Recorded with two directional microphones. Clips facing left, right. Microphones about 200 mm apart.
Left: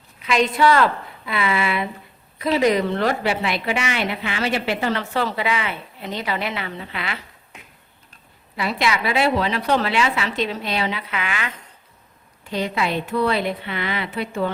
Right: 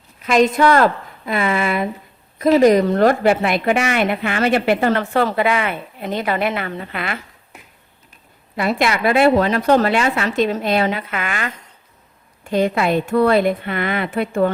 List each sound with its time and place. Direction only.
0.2 s a woman's voice: 45° right (ahead or behind)
8.5 s a woman's voice: 50° right (ahead or behind)